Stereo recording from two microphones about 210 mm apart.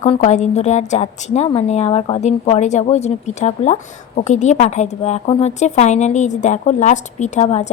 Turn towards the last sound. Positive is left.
turn(degrees=35)  # may be behind; listen again after turning